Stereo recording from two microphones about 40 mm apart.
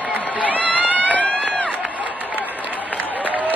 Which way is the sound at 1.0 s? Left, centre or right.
Left.